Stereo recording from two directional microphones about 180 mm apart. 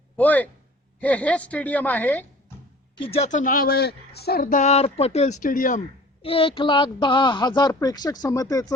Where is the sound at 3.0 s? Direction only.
30° left (ahead or behind); by 5.8 s 50° left (ahead or behind).